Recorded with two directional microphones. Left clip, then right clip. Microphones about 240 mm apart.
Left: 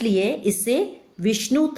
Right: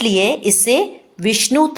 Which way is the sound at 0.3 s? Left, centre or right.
Centre.